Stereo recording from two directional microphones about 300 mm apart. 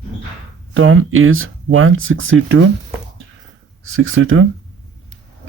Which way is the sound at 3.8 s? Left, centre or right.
Right.